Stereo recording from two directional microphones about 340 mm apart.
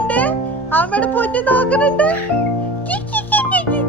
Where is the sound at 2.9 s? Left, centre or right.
Centre.